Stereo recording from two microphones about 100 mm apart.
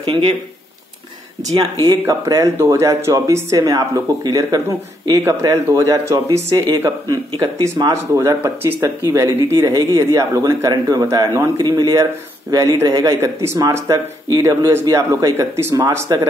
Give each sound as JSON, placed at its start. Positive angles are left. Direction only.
{"t": 0.0, "sound": "speech", "side_deg": -65}
{"t": 1.8, "sound": "a man's voice", "side_deg": -40}
{"t": 2.3, "sound": "a man's voice", "side_deg": -25}